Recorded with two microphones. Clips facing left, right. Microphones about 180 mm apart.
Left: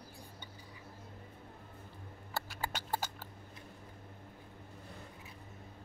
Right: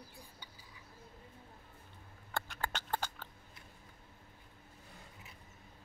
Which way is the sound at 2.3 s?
5° left (ahead or behind).